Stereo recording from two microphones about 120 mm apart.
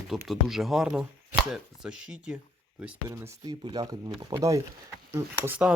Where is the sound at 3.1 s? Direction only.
35° right (ahead or behind).